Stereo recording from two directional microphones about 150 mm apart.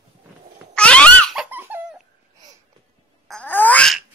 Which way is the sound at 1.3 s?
10° right (ahead or behind).